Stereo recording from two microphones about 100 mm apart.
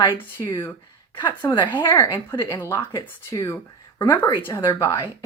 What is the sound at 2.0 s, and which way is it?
Speech, 30° left (ahead or behind).